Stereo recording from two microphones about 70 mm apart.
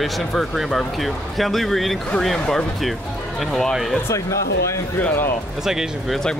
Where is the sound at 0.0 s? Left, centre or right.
Centre.